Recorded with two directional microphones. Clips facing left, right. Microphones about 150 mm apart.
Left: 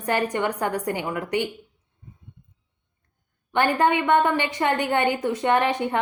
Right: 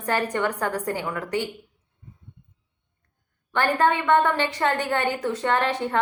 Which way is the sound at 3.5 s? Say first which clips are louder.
Left 1 dB; 15° left (ahead or behind).